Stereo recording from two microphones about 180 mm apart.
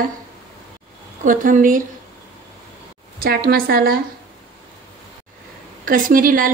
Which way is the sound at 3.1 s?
55° right (ahead or behind).